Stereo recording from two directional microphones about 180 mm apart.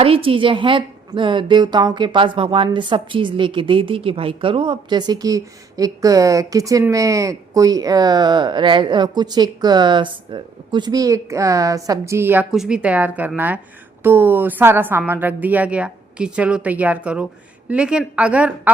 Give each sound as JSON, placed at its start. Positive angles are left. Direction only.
{"t": 0.0, "sound": "a woman's voice", "side_deg": -30}